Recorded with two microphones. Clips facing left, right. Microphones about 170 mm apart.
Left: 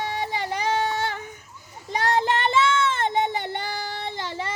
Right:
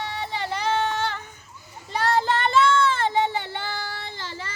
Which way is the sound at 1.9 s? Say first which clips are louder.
Even; 20° left (ahead or behind).